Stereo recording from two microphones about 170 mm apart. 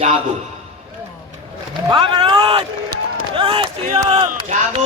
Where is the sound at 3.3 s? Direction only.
35° right (ahead or behind).